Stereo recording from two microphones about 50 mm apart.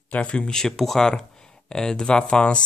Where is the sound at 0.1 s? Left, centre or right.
Left.